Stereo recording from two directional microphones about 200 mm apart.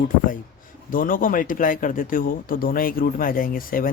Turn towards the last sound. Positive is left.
turn(degrees=45)  # may be behind; listen again after turning